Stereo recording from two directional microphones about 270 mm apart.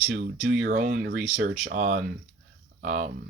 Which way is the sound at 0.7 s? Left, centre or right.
Right.